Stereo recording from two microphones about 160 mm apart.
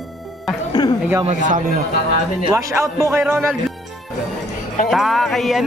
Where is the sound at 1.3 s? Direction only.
50° right (ahead or behind).